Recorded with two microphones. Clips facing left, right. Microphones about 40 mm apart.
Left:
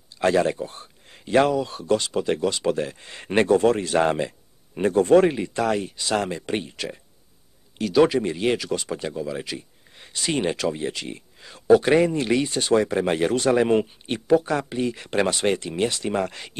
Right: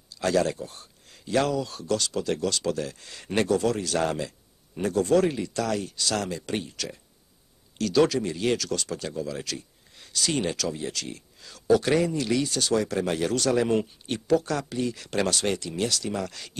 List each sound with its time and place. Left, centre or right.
0.2 s a man's voice: left